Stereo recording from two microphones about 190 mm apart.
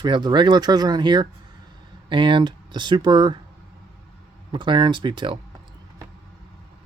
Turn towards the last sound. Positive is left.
turn(degrees=-25)  # may be behind; listen again after turning